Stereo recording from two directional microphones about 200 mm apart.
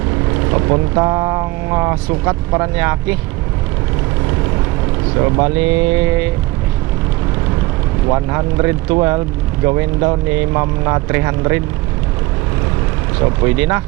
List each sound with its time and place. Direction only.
0.5 s speech: 20° right (ahead or behind)
5.1 s speech: 20° right (ahead or behind)
8.0 s speech: 20° right (ahead or behind)
13.4 s speech: 15° right (ahead or behind)